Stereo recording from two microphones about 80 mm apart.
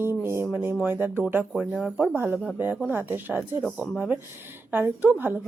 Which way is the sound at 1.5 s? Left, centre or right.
Centre.